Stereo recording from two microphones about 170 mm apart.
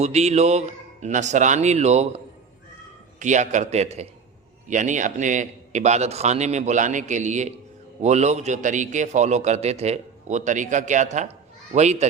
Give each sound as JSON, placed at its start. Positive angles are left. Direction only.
{"t": 0.0, "sound": "a man's voice", "side_deg": -40}